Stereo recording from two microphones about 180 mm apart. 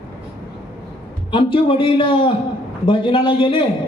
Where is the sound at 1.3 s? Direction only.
30° left (ahead or behind).